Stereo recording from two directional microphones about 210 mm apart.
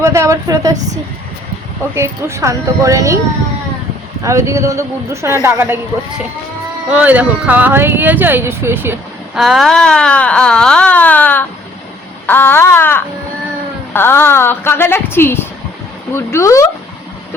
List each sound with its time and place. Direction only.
0.0 s speech: 15° right (ahead or behind)
2.0 s speech: 15° right (ahead or behind)
4.2 s speech: 15° right (ahead or behind)
6.9 s speech: 5° right (ahead or behind)
12.2 s a sound: 10° left (ahead or behind)
13.9 s a woman's voice: 10° left (ahead or behind)